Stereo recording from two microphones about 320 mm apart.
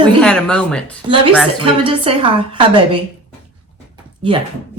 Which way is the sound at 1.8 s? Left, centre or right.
Centre.